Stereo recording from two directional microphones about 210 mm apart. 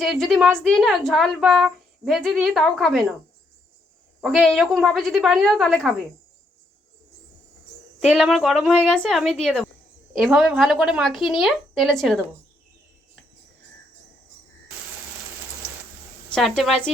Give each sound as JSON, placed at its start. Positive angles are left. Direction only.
{"t": 0.0, "sound": "speech", "side_deg": 0}
{"t": 4.2, "sound": "speech", "side_deg": 0}
{"t": 7.9, "sound": "speech", "side_deg": 0}
{"t": 16.3, "sound": "speech", "side_deg": 0}